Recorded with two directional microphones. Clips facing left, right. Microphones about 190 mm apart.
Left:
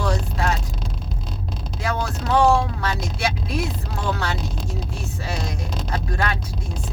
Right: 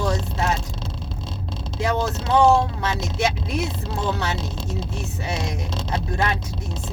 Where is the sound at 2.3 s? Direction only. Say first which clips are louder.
Right 1 dB; 25° right (ahead or behind).